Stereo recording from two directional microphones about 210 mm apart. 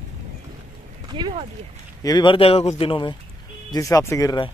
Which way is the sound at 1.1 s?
25° right (ahead or behind).